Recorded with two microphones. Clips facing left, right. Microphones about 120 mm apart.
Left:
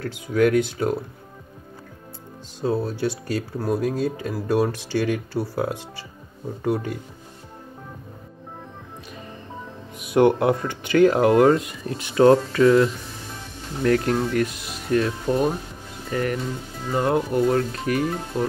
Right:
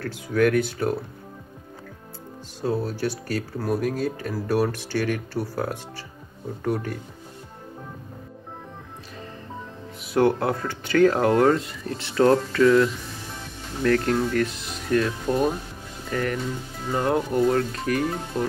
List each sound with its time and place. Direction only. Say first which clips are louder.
0.0 s speech: left 1 dB; 15° left (ahead or behind)
2.6 s speech: left 2 dB; 15° left (ahead or behind)
9.9 s speech: left 3 dB; 15° left (ahead or behind)
12.6 s speech: left 1 dB; 25° left (ahead or behind)
13.8 s speech: left 1 dB; 15° left (ahead or behind)